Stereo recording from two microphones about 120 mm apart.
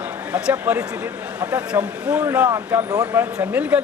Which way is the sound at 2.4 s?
30° right (ahead or behind).